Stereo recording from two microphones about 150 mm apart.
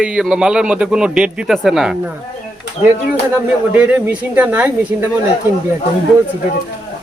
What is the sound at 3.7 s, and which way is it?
Speech, 10° right (ahead or behind).